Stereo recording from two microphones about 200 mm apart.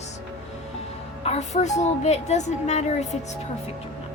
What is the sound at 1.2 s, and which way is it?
A woman's voice, 35° left (ahead or behind).